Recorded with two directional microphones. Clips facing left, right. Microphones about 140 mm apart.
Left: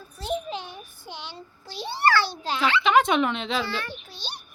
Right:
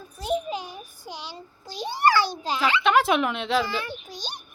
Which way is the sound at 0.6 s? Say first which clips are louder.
Right 2 dB; 40° right (ahead or behind).